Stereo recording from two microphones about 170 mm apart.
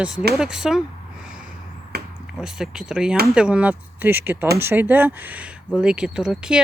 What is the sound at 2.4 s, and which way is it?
Speech, 5° right (ahead or behind).